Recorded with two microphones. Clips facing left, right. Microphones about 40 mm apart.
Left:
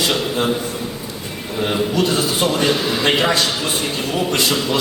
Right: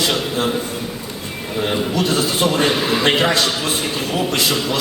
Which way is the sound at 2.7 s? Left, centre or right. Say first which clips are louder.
Right 1 dB; centre.